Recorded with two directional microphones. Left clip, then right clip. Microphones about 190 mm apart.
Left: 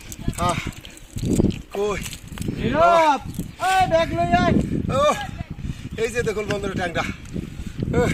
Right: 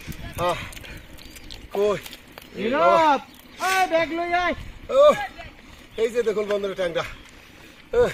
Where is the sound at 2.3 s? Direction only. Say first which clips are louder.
Left 2 dB; 40° left (ahead or behind).